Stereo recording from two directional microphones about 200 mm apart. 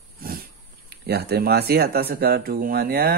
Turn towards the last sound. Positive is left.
turn(degrees=-50)  # may be behind; listen again after turning